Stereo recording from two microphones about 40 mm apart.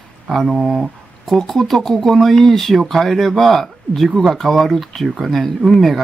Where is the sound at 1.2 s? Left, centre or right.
Centre.